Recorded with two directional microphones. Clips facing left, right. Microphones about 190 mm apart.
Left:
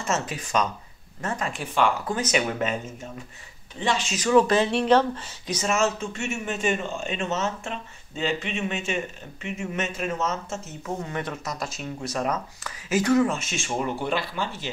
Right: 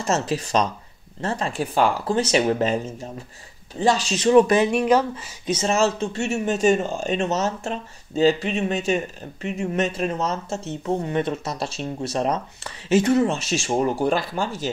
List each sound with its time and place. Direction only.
0.0 s speech: 35° right (ahead or behind); by 5.3 s 10° right (ahead or behind)
5.5 s speech: 30° right (ahead or behind)